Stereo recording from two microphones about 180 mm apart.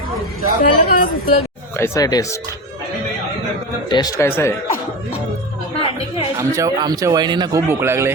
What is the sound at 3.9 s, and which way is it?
Speech, 20° left (ahead or behind).